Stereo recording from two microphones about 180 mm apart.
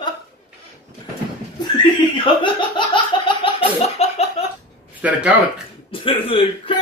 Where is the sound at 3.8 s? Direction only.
35° left (ahead or behind).